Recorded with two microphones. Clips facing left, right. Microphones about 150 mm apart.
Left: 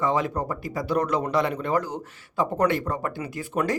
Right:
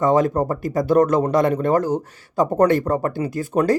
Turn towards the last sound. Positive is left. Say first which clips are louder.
# right 7 dB
turn(degrees=-40)  # may be behind; listen again after turning